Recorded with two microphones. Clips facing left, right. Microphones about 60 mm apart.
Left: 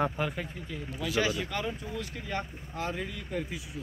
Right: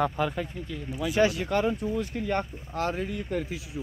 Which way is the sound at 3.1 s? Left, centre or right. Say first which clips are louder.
Right 5 dB; right.